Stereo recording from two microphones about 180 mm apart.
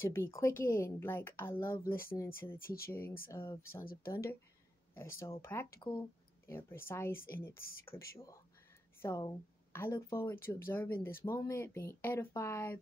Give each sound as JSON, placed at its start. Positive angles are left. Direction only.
{"t": 0.1, "sound": "a woman's voice", "side_deg": 15}
{"t": 2.6, "sound": "speech", "side_deg": 55}
{"t": 2.9, "sound": "a woman's voice", "side_deg": 15}
{"t": 3.8, "sound": "speech", "side_deg": 55}
{"t": 4.9, "sound": "a woman's voice", "side_deg": 15}
{"t": 5.8, "sound": "speech", "side_deg": 25}
{"t": 6.4, "sound": "a woman's voice", "side_deg": 15}
{"t": 9.0, "sound": "a woman's voice", "side_deg": 15}